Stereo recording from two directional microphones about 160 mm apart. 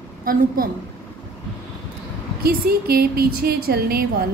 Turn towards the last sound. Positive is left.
turn(degrees=-75)  # may be behind; listen again after turning